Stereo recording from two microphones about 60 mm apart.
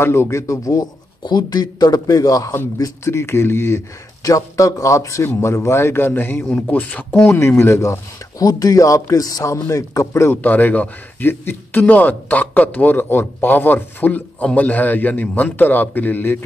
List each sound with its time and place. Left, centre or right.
0.0 s speech: left
1.5 s a man's voice: left
3.1 s speech: left
4.2 s a man's voice: left
7.3 s speech: left
8.4 s a man's voice: left
9.7 s speech: left
10.3 s speech: left